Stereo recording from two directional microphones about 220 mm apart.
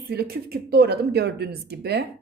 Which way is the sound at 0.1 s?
45° right (ahead or behind).